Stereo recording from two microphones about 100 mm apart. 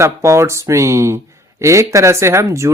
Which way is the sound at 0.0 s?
30° right (ahead or behind).